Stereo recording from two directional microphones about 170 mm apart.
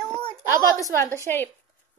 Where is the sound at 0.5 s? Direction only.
20° right (ahead or behind).